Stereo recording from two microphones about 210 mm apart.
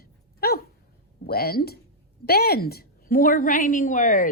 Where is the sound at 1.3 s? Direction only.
50° left (ahead or behind).